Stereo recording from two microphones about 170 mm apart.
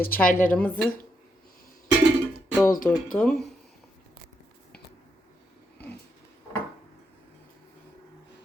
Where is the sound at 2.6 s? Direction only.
50° left (ahead or behind).